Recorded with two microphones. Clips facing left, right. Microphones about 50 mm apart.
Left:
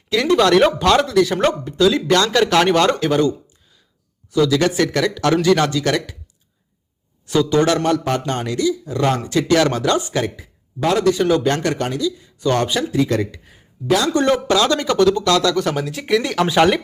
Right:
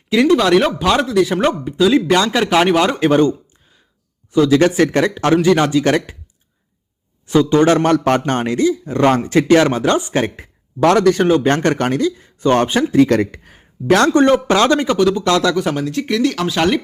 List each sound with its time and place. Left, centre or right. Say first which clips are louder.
0.3 s speech: left 2 dB; centre
3.0 s speech: right 4 dB; right
7.3 s speech: right 4 dB; right
7.9 s speech: right 5 dB; right
8.2 s speech: right 4 dB; right
10.8 s speech: right 5 dB; right
11.3 s speech: right 3 dB; right
13.0 s speech: right 8 dB; right
14.1 s speech: right 4 dB; right
14.9 s speech: even; centre
15.2 s speech: right 1 dB; right
15.5 s speech: right 2 dB; centre